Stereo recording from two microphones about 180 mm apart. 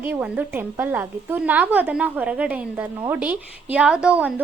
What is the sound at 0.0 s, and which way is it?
A woman's voice, 10° right (ahead or behind).